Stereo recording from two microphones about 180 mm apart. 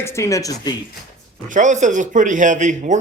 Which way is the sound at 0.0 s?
15° left (ahead or behind).